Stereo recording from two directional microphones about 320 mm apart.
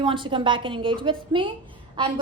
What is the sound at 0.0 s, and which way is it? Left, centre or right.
A woman's voice, centre.